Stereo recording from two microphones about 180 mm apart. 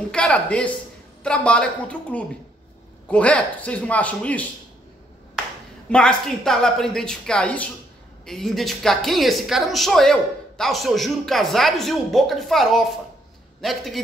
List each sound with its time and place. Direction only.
0.1 s a man's voice: 5° left (ahead or behind)
5.9 s speech: 5° left (ahead or behind)